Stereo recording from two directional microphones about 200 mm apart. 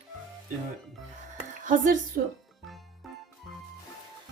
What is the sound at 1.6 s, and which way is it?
Speech, 40° right (ahead or behind).